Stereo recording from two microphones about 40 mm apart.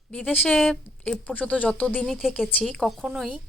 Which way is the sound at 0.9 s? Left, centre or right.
Left.